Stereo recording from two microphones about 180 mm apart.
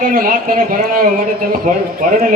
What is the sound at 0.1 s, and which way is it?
A man's voice, 50° right (ahead or behind).